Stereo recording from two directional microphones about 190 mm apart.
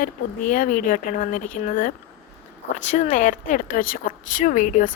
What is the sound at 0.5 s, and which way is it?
A woman's voice, 45° left (ahead or behind).